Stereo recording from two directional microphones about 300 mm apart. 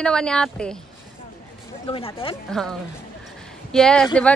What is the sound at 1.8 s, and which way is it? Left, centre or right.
Speech, centre.